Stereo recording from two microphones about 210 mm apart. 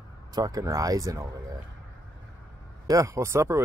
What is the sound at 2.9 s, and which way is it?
Speech, 15° right (ahead or behind).